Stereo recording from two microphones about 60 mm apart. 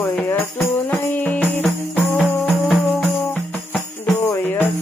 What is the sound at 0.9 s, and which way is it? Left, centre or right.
Music, left.